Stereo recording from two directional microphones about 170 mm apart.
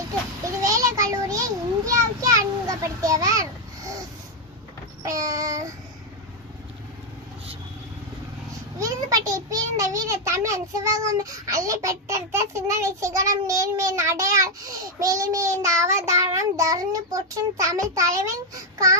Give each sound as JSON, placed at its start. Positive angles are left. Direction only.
{"t": 0.6, "sound": "child singing", "side_deg": -20}
{"t": 5.2, "sound": "a child's voice", "side_deg": -20}
{"t": 8.8, "sound": "a child's voice", "side_deg": -20}